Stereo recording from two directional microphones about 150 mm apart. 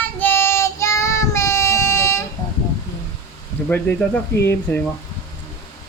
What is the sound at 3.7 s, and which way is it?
Speech, 10° left (ahead or behind).